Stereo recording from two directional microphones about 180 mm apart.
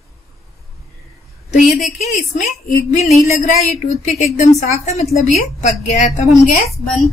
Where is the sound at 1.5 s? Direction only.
40° left (ahead or behind).